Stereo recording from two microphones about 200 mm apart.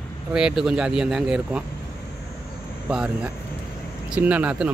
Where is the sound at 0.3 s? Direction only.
5° right (ahead or behind).